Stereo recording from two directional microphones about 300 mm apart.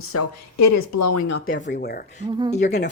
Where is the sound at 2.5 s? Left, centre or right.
Left.